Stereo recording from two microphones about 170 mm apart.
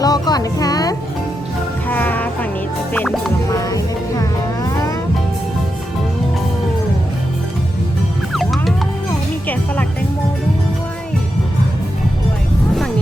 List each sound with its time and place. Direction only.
0.0 s music: 20° left (ahead or behind)
1.9 s music: 10° left (ahead or behind)
3.5 s music: 20° left (ahead or behind)
8.3 s music: centre (ahead or behind)